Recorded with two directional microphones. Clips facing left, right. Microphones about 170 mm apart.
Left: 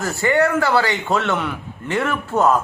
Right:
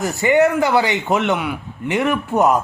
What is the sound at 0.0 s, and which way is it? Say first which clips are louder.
A man's voice: right 3 dB; 20° right (ahead or behind).